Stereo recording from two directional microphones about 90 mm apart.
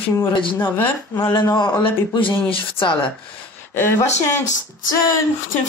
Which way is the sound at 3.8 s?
25° left (ahead or behind).